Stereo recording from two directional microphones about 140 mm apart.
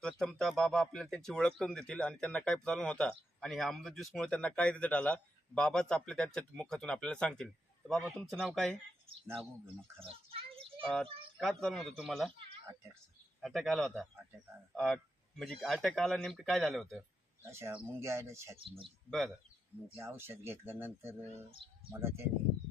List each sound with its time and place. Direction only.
0.0 s speech: 5° left (ahead or behind)
10.0 s children playing: 40° right (ahead or behind)
10.8 s speech: 5° left (ahead or behind)
13.4 s speech: centre (ahead or behind)
17.4 s speech: 15° right (ahead or behind)
20.0 s speech: 15° right (ahead or behind)